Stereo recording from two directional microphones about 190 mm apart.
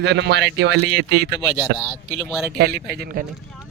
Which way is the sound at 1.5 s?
5° right (ahead or behind).